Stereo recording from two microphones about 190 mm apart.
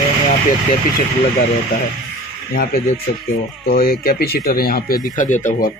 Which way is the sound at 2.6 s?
50° left (ahead or behind).